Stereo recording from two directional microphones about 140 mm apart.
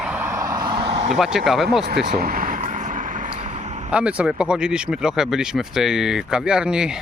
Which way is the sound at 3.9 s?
10° right (ahead or behind).